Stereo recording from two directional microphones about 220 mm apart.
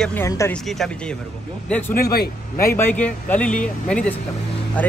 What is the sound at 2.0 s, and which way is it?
Speech, 45° left (ahead or behind).